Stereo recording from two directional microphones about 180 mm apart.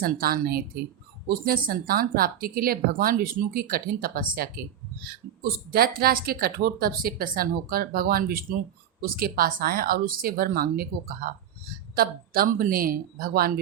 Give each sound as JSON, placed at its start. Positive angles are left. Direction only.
{"t": 0.0, "sound": "speech", "side_deg": -55}